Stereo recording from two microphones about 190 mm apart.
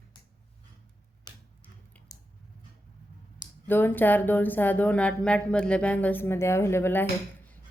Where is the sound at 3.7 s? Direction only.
10° left (ahead or behind).